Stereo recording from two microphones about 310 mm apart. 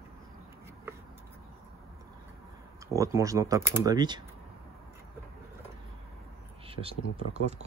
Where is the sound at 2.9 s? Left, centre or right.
Centre.